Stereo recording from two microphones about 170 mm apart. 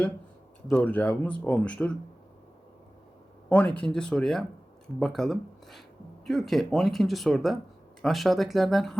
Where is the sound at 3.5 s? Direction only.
5° left (ahead or behind).